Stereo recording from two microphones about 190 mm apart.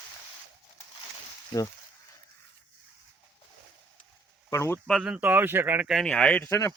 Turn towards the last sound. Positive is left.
turn(degrees=5)  # may be behind; listen again after turning